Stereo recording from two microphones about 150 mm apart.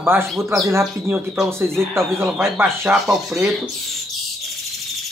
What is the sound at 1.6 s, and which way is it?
Speech, 5° left (ahead or behind).